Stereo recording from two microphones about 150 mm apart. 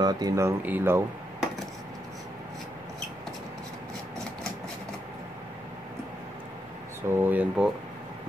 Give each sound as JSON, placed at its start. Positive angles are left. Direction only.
{"t": 0.0, "sound": "speech", "side_deg": -25}
{"t": 7.1, "sound": "speech", "side_deg": -15}